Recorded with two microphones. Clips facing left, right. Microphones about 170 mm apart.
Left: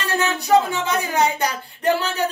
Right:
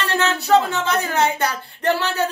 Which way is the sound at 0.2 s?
15° left (ahead or behind).